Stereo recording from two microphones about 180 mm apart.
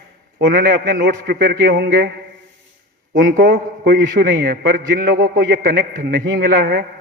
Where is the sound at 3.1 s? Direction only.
80° right; by 6.8 s 60° right (ahead or behind).